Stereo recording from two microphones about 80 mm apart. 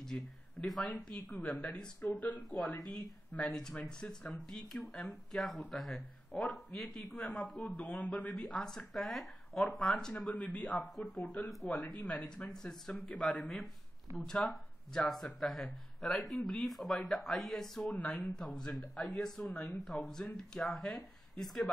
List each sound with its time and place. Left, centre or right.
0.0 s speech: centre
3.3 s speech: centre